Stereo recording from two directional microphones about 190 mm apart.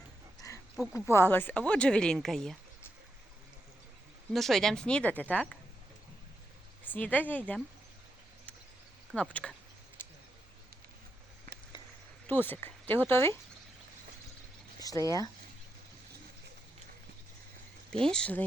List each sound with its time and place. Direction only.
0.8 s speech: 5° right (ahead or behind)
1.1 s a woman's voice: 10° left (ahead or behind)
4.3 s a woman's voice: centre (ahead or behind)
6.8 s speech: 10° left (ahead or behind)
9.3 s a woman's voice: 5° left (ahead or behind)
12.3 s speech: 10° left (ahead or behind)
14.8 s a sound: 20° left (ahead or behind)
18.0 s a woman's voice: 5° left (ahead or behind)